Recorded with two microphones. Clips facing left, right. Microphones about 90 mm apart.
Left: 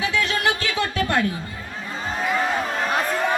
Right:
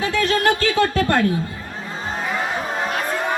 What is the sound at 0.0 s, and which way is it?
Speech, 40° right (ahead or behind).